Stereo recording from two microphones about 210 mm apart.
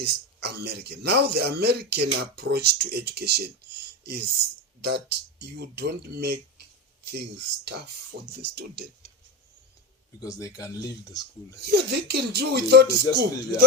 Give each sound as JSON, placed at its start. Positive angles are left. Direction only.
{"t": 0.0, "sound": "speech", "side_deg": -50}
{"t": 4.8, "sound": "speech", "side_deg": -50}
{"t": 10.2, "sound": "speech", "side_deg": 15}
{"t": 11.6, "sound": "speech", "side_deg": -50}